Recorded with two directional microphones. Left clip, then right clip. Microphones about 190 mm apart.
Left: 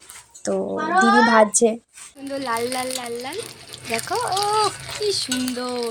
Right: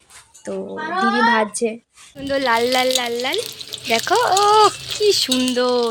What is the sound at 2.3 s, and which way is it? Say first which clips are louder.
Speech: right 8 dB; 20° right (ahead or behind).